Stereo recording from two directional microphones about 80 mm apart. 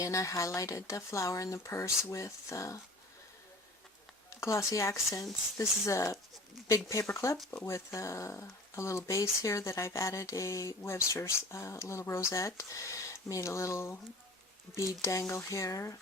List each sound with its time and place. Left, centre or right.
0.0 s speech: left
4.4 s speech: left
15.0 s speech: left